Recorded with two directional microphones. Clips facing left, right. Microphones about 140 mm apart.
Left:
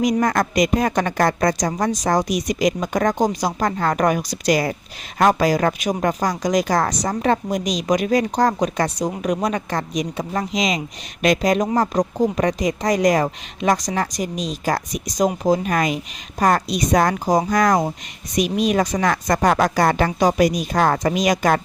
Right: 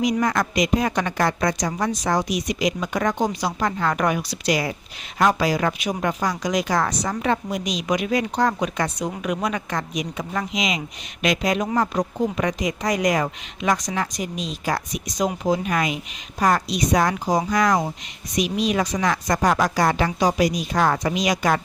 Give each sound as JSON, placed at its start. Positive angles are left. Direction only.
{"t": 0.0, "sound": "a woman's voice", "side_deg": 45}